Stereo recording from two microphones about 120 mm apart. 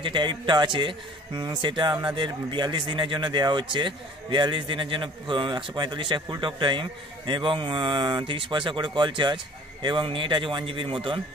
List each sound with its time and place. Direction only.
0.0 s speech: 40° right (ahead or behind)